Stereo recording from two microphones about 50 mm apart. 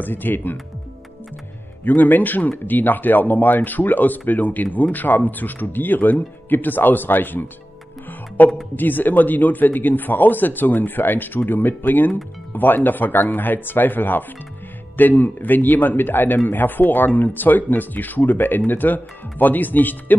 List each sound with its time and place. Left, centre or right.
0.0 s a man's voice: left
1.9 s a man's voice: left